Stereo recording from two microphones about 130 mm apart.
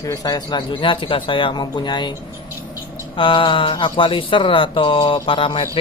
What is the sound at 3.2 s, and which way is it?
Speech, 40° left (ahead or behind).